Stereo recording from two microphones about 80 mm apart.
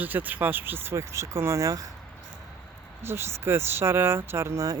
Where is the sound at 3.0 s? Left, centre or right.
Right.